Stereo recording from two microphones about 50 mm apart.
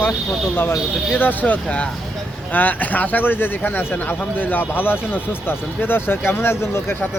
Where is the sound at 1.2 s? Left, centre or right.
Left.